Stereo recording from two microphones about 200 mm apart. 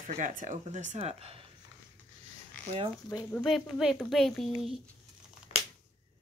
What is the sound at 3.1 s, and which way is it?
Speech, 10° left (ahead or behind).